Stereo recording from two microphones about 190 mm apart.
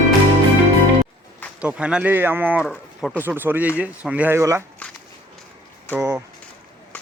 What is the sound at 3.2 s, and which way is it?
Speech, 10° right (ahead or behind).